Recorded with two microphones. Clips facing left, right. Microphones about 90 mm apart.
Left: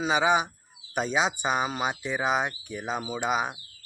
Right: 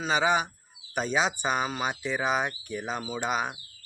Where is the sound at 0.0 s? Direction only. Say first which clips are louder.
Left 2 dB; 15° left (ahead or behind).